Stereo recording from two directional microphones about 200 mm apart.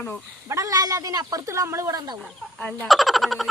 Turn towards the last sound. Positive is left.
turn(degrees=0)  # may be behind; listen again after turning